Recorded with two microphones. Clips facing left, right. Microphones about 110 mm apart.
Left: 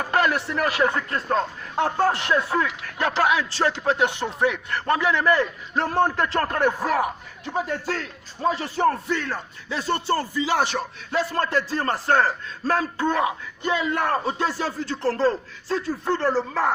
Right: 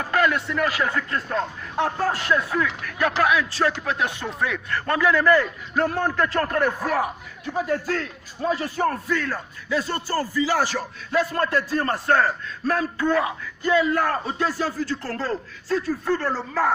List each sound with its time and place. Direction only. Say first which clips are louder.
0.1 s speech: right 1 dB; 30° left (ahead or behind)
7.4 s speech: right 2 dB; 30° left (ahead or behind)